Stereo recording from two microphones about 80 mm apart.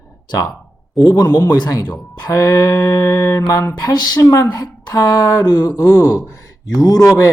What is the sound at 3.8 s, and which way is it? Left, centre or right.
Speech, left.